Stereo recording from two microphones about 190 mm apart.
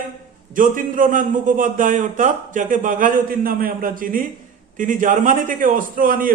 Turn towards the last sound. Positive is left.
turn(degrees=-45)  # may be behind; listen again after turning